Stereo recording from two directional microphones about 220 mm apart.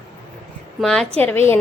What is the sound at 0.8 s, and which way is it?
Speech, centre (ahead or behind).